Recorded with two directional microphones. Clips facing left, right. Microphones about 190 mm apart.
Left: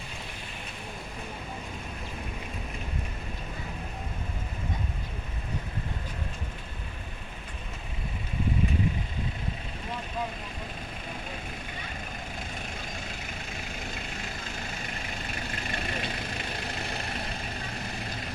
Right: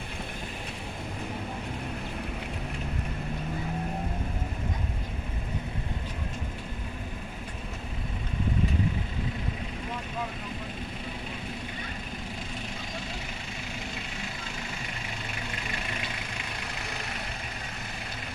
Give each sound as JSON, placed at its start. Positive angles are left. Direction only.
{"t": 15.6, "sound": "vehicle", "side_deg": 45}